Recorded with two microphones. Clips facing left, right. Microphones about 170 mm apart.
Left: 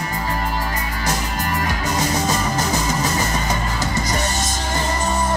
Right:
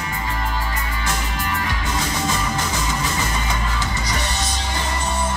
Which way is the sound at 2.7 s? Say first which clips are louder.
Left 4 dB; 40° left (ahead or behind).